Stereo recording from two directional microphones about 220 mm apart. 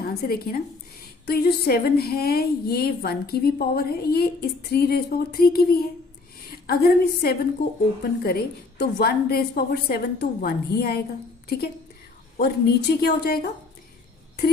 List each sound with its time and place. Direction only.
0.0 s a woman's voice: 45° left (ahead or behind)